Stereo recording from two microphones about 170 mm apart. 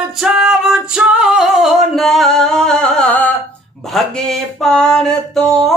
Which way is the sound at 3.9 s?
Centre (ahead or behind).